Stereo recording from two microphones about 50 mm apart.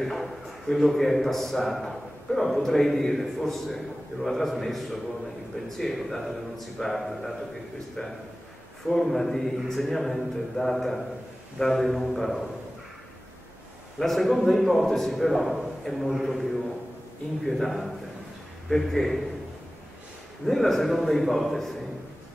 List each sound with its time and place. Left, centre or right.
0.0 s a man's voice: centre
8.0 s a man's voice: centre
8.8 s a man's voice: centre
11.8 s a man's voice: centre
13.9 s a man's voice: centre
17.5 s a man's voice: centre
20.4 s a man's voice: centre